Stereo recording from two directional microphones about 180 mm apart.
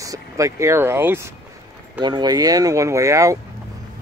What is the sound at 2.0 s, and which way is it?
Speech, 25° right (ahead or behind).